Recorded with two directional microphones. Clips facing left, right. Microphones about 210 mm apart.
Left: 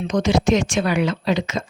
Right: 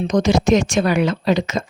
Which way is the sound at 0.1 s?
40° right (ahead or behind).